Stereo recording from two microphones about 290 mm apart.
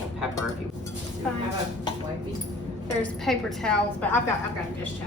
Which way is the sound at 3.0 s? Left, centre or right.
Centre.